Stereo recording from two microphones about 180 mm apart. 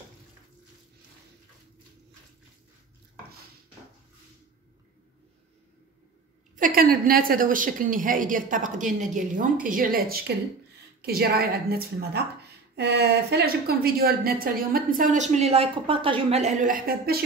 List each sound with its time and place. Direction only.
6.5 s a woman's voice: 50° right (ahead or behind)